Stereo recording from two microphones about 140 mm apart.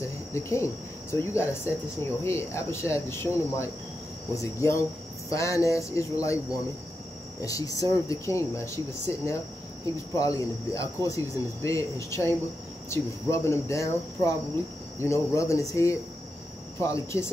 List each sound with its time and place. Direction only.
0.3 s speech: 20° left (ahead or behind)